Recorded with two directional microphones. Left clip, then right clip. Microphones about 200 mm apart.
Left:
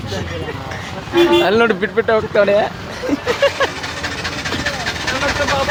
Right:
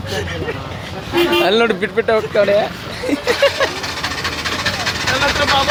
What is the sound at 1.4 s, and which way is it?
Speech, 5° left (ahead or behind).